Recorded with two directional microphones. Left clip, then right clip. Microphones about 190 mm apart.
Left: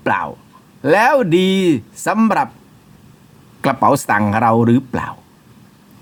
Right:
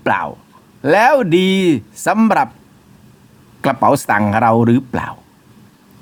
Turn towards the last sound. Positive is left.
turn(degrees=-10)  # may be behind; listen again after turning